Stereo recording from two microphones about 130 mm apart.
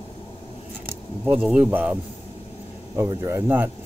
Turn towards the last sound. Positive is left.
turn(degrees=-15)  # may be behind; listen again after turning